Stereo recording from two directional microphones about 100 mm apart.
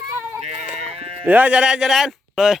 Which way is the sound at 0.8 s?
75° right (ahead or behind).